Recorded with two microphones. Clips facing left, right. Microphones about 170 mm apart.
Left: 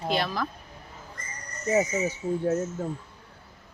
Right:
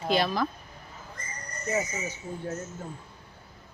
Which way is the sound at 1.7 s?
40° left (ahead or behind).